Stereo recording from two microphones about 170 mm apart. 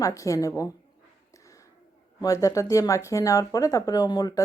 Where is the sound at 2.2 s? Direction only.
20° left (ahead or behind).